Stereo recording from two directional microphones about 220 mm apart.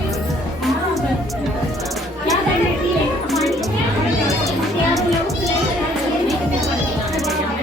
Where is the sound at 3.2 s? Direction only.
Centre (ahead or behind).